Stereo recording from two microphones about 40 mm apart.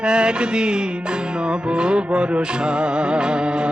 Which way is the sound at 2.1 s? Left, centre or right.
Right.